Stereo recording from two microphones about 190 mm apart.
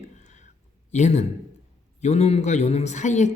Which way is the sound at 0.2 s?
40° left (ahead or behind).